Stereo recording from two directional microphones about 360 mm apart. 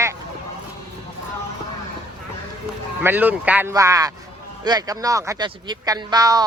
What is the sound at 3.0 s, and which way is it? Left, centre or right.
Speech, centre.